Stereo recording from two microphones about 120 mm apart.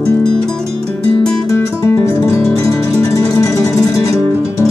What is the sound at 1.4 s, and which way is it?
Music, 25° left (ahead or behind).